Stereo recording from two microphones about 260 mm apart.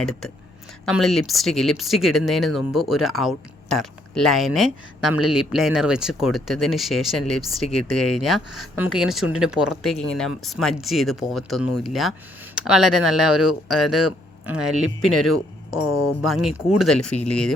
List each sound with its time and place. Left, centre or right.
0.0 s speech: centre
9.2 s speech: left
9.5 s speech: centre
13.9 s speech: left
16.2 s speech: centre